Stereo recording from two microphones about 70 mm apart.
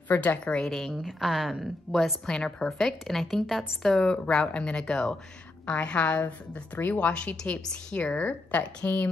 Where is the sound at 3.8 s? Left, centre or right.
Centre.